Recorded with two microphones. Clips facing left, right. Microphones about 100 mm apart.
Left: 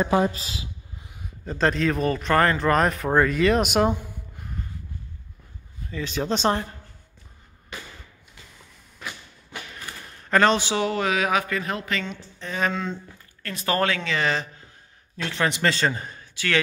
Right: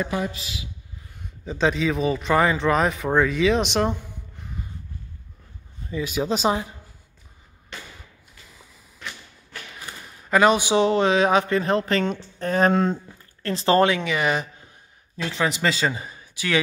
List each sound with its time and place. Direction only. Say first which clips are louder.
0.0 s a man's voice: left 5 dB; 35° left (ahead or behind)
1.1 s a man's voice: right 1 dB; centre (ahead or behind)
5.9 s speech: right 2 dB; 10° right (ahead or behind)
7.7 s a sound: left 1 dB; 5° left (ahead or behind)
9.0 s thump: left 1 dB; 5° left (ahead or behind)
10.3 s a man's voice: right 2 dB; 10° right (ahead or behind); by 13.0 s 45° right (ahead or behind)
13.4 s speech: right 6 dB; 30° right (ahead or behind)
15.2 s a man's voice: even; 5° right (ahead or behind)